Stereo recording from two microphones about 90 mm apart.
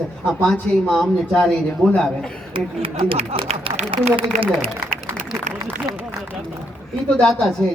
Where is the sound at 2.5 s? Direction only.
85° right.